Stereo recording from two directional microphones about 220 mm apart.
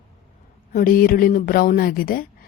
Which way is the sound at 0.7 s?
40° left (ahead or behind).